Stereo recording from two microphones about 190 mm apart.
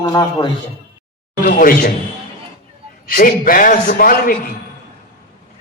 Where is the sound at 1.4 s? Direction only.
45° left (ahead or behind).